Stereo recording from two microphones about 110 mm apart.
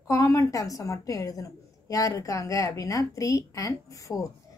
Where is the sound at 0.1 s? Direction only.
30° left (ahead or behind).